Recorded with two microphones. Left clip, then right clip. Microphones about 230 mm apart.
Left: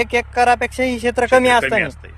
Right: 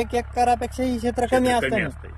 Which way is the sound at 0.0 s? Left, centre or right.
Centre.